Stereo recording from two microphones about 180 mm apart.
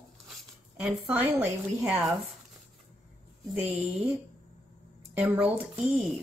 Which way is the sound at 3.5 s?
5° right (ahead or behind).